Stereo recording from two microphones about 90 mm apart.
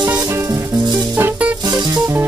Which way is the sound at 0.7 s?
50° right (ahead or behind).